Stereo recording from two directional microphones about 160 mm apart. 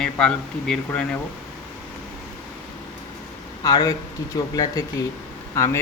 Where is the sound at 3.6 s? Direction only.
25° left (ahead or behind).